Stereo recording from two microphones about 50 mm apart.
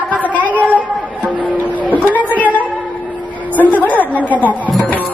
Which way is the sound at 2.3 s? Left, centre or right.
Left.